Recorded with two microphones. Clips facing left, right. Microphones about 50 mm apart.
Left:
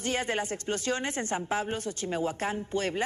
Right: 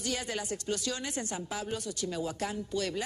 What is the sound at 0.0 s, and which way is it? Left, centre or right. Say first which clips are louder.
A woman's voice: left 5 dB; left.